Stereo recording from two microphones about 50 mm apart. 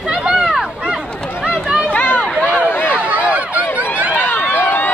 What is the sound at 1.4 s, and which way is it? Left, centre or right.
Run, centre.